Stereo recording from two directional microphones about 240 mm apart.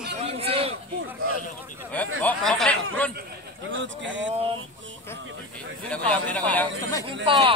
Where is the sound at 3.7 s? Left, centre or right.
Right.